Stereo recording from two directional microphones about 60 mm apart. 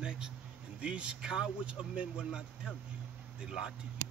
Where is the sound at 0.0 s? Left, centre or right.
Centre.